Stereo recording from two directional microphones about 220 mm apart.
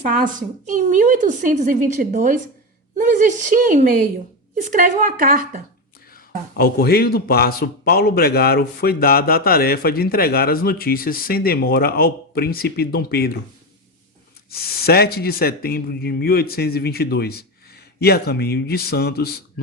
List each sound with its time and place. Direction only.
0.1 s a woman's voice: 35° right (ahead or behind)
6.1 s speech: 45° left (ahead or behind)
14.5 s speech: 45° left (ahead or behind)